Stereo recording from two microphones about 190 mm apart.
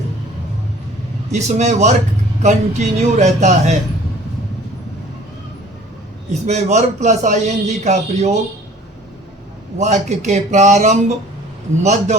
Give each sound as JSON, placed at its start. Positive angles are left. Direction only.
{"t": 1.3, "sound": "a man's voice", "side_deg": -40}
{"t": 6.5, "sound": "a man's voice", "side_deg": -35}
{"t": 9.7, "sound": "a man's voice", "side_deg": -40}